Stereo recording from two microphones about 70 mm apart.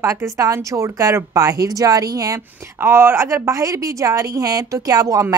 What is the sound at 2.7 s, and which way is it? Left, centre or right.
A woman's voice, right.